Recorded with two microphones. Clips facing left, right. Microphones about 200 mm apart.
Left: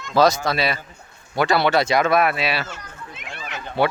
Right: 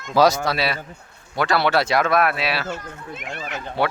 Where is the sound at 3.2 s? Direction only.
45° right (ahead or behind).